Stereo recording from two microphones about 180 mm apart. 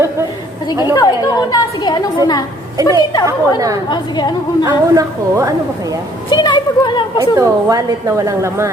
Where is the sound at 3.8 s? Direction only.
25° left (ahead or behind).